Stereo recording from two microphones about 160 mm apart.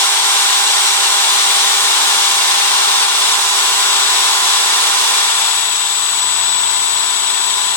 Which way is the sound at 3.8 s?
15° left (ahead or behind).